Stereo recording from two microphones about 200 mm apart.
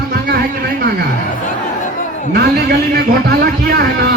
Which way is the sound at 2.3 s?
55° right (ahead or behind).